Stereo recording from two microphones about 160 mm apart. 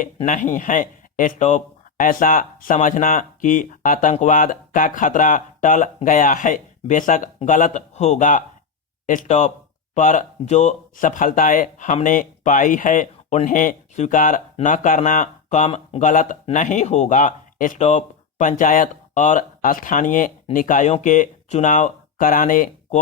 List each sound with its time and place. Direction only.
0.3 s speech: 55° left (ahead or behind)